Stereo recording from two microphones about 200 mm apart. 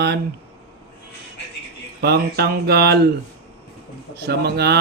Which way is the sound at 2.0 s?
55° right (ahead or behind).